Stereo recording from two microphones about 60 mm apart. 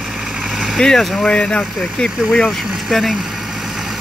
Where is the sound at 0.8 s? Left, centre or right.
Centre.